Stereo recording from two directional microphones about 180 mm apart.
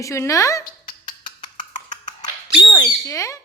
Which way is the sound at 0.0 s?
15° left (ahead or behind).